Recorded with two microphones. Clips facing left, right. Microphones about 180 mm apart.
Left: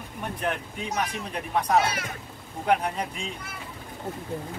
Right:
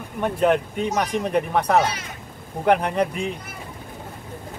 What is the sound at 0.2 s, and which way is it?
Speech, 65° right (ahead or behind).